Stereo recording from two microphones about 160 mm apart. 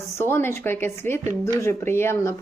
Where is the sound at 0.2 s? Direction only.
15° left (ahead or behind).